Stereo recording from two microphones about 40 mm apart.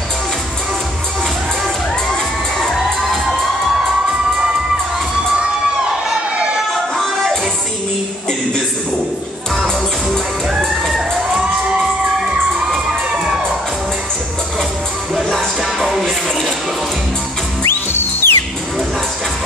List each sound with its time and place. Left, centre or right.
6.3 s a sound: right
15.1 s music: centre
17.6 s music: left